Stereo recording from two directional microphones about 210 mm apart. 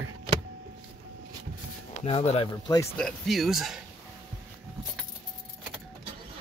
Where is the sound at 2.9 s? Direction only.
Centre (ahead or behind).